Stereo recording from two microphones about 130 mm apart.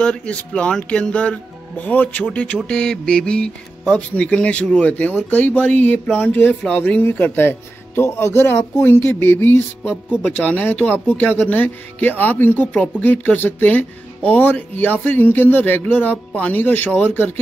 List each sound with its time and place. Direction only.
0.0 s speech: 10° left (ahead or behind)